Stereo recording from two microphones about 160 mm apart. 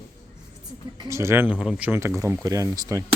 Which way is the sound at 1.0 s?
15° right (ahead or behind).